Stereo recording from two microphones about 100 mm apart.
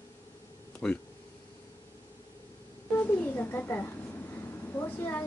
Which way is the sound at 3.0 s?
20° left (ahead or behind).